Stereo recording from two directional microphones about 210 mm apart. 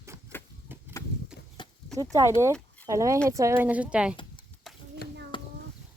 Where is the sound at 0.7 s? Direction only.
10° right (ahead or behind).